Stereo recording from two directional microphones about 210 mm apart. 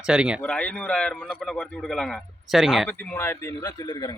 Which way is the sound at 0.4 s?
5° left (ahead or behind).